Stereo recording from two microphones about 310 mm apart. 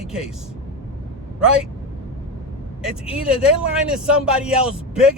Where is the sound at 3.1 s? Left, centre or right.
Centre.